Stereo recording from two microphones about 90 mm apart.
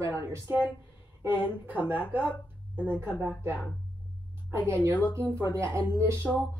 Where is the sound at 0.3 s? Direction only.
20° right (ahead or behind).